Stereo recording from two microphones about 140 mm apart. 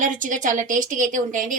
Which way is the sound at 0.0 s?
65° right (ahead or behind).